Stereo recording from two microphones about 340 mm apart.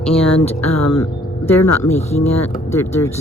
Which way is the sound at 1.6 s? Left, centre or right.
Left.